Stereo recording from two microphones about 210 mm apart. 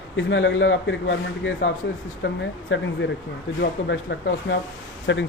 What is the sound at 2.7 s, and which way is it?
A man's voice, 60° left (ahead or behind).